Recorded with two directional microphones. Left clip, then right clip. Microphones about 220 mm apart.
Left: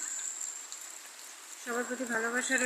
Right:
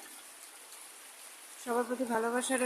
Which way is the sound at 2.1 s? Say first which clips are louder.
Left 2 dB; 20° right (ahead or behind).